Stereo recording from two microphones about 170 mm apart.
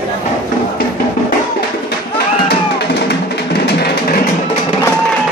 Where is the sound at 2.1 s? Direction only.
75° left (ahead or behind).